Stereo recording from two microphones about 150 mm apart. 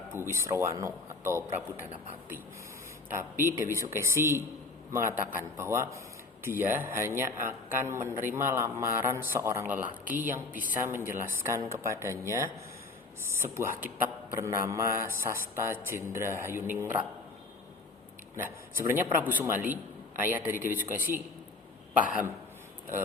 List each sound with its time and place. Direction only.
0.1 s a man's voice: 15° right (ahead or behind)
3.2 s a man's voice: 15° right (ahead or behind)
18.8 s a man's voice: 15° right (ahead or behind)